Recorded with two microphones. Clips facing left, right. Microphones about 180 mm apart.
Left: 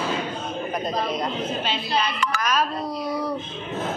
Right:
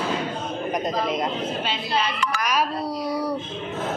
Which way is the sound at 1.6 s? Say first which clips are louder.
Even; 10° right (ahead or behind).